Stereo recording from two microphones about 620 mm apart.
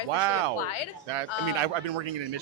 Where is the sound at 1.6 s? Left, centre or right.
Right.